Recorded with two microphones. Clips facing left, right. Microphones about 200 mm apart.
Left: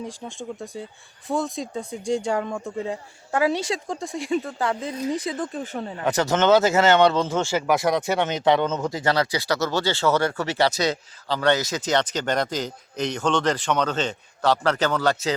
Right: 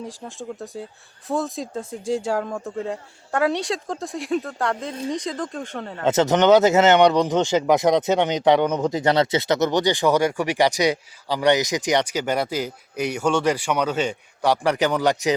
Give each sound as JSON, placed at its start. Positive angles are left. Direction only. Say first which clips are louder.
{"t": 0.0, "sound": "speech", "louder": "even", "side_deg": 0}
{"t": 6.1, "sound": "speech", "louder": "right 3 dB", "side_deg": -20}